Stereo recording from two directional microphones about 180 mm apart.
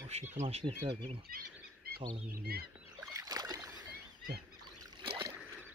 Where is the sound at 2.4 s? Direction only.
55° right (ahead or behind).